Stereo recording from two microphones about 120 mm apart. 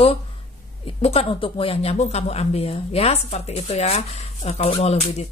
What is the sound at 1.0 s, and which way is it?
Speech, 50° left (ahead or behind).